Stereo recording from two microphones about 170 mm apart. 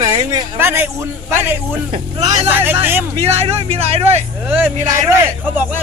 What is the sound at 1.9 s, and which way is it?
Speech, 35° right (ahead or behind).